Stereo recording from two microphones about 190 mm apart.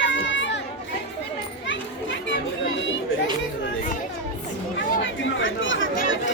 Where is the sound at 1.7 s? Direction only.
75° left (ahead or behind).